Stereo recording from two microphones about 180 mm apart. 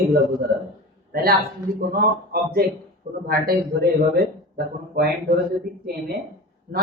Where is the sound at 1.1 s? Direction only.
55° right (ahead or behind).